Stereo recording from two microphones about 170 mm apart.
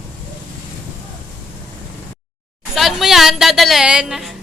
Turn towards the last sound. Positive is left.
turn(degrees=0)  # may be behind; listen again after turning